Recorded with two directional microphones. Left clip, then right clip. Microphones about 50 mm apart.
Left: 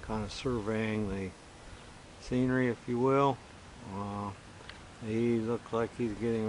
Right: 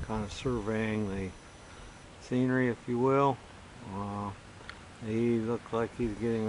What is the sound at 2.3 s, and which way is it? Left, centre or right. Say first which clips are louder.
Speech: right 1 dB; centre.